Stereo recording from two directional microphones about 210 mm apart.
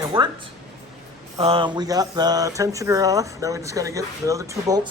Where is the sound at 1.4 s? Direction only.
25° right (ahead or behind).